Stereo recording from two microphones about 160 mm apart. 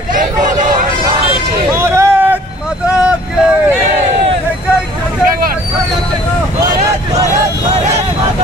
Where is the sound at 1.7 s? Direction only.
15° right (ahead or behind).